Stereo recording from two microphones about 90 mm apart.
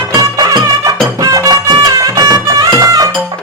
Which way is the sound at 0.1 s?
45° right (ahead or behind).